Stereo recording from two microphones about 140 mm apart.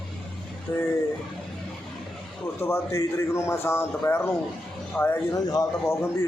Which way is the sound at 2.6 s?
20° left (ahead or behind).